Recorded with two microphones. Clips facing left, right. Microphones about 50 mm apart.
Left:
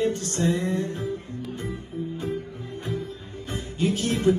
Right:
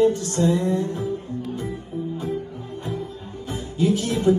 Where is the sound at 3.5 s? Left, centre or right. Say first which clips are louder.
Right 4 dB; left.